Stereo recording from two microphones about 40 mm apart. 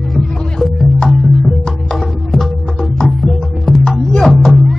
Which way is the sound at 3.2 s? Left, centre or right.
Centre.